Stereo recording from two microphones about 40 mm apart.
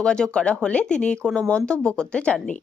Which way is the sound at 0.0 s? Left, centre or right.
Left.